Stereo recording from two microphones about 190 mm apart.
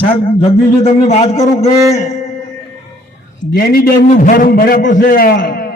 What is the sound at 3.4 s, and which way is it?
A man's voice, 60° left (ahead or behind).